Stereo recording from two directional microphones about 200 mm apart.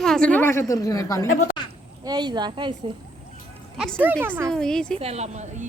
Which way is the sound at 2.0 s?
20° right (ahead or behind).